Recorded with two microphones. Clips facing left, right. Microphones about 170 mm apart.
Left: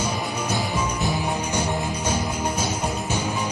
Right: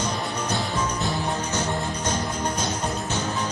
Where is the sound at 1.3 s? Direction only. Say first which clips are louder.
Left 1 dB; 10° left (ahead or behind).